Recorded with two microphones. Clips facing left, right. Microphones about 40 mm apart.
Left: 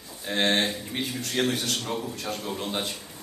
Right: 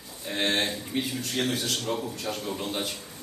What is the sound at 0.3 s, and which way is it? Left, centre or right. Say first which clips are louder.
A man's voice: left 2 dB; left.